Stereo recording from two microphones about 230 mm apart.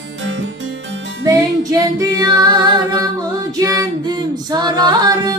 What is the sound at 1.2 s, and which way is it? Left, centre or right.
Music, centre.